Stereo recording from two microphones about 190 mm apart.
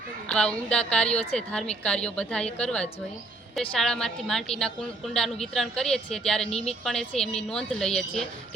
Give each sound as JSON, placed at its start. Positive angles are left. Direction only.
{"t": 0.3, "sound": "a woman's voice", "side_deg": 5}
{"t": 1.1, "sound": "a woman's voice", "side_deg": 35}
{"t": 1.4, "sound": "a woman's voice", "side_deg": 5}